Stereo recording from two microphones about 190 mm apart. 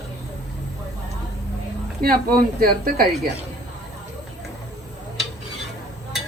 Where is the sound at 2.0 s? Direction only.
50° right (ahead or behind).